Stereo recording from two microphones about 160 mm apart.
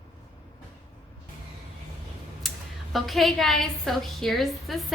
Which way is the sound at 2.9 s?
Centre (ahead or behind).